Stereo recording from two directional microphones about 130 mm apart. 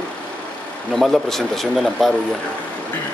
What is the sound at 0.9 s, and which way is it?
Speech, centre (ahead or behind).